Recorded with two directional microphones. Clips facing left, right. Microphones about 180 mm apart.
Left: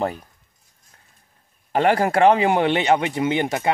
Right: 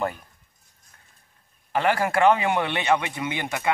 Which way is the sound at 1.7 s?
40° left (ahead or behind).